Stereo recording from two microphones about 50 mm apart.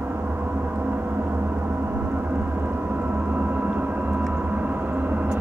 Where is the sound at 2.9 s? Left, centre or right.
Right.